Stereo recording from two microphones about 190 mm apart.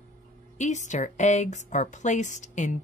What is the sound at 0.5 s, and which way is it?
Speech, 40° left (ahead or behind).